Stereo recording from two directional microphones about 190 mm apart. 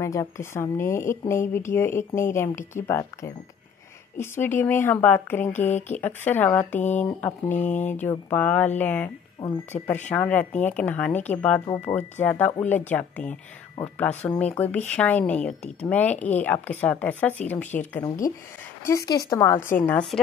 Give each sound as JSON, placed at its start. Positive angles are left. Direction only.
{"t": 0.0, "sound": "a woman's voice", "side_deg": 15}
{"t": 5.7, "sound": "speech", "side_deg": 35}
{"t": 5.9, "sound": "a woman's voice", "side_deg": 10}
{"t": 11.6, "sound": "speech", "side_deg": 20}
{"t": 11.9, "sound": "a woman's voice", "side_deg": 10}